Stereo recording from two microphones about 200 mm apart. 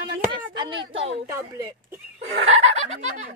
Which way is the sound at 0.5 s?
25° right (ahead or behind).